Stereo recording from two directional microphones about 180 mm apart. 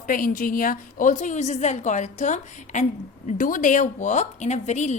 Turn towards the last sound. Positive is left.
turn(degrees=40)  # may be behind; listen again after turning